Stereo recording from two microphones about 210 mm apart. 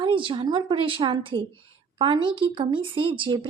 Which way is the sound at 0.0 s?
25° right (ahead or behind).